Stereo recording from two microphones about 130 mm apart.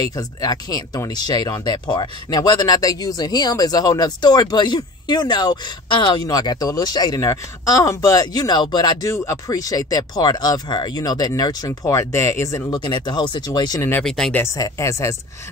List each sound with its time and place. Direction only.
0.0 s speech: 30° left (ahead or behind)
14.0 s speech: 5° left (ahead or behind)
14.3 s speech: 20° left (ahead or behind)